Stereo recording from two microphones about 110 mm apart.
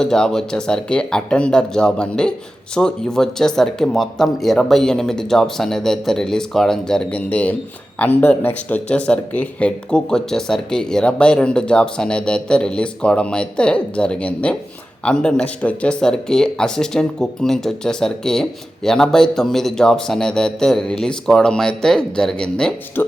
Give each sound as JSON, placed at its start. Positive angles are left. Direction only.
{"t": 0.0, "sound": "speech", "side_deg": 5}
{"t": 23.0, "sound": "speech", "side_deg": 15}